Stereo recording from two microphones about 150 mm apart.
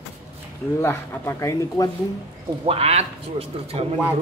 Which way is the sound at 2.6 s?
40° right (ahead or behind).